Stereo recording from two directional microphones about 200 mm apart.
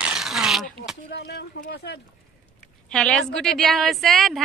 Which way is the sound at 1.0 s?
55° left (ahead or behind).